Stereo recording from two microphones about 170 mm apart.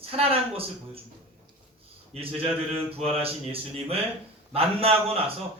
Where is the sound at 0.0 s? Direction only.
35° right (ahead or behind).